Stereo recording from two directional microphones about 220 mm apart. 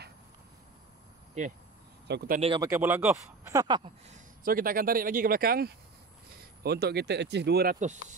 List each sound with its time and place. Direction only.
1.4 s speech: 30° right (ahead or behind)
2.0 s speech: 45° right (ahead or behind)
2.4 s speech: 20° right (ahead or behind)
2.7 s speech: 10° right (ahead or behind)
4.1 s speech: 40° right (ahead or behind)